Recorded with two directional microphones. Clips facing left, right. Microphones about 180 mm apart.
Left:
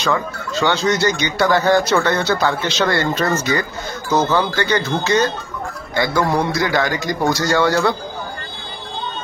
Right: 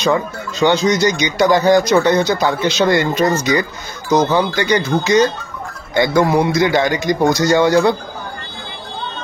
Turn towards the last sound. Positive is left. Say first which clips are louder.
# right 4 dB
turn(degrees=-20)  # may be behind; listen again after turning